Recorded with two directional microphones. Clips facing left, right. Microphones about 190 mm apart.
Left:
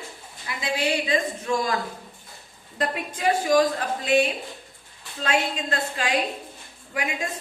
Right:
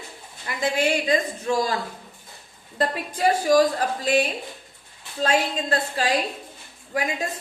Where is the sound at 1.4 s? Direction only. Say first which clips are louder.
Right 2 dB; 30° right (ahead or behind).